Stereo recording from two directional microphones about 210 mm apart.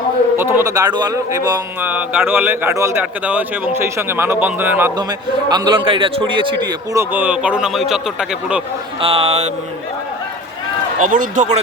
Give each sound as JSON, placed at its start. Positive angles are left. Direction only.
{"t": 0.3, "sound": "speech", "side_deg": -10}
{"t": 5.5, "sound": "speech", "side_deg": -20}
{"t": 9.0, "sound": "speech", "side_deg": -25}
{"t": 11.0, "sound": "a man's voice", "side_deg": -40}